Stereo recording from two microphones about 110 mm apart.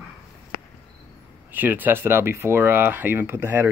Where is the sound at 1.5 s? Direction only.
15° right (ahead or behind).